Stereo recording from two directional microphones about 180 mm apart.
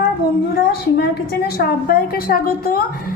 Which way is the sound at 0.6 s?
65° left (ahead or behind).